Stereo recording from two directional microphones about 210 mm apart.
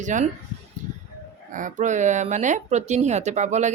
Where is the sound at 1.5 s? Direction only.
35° right (ahead or behind).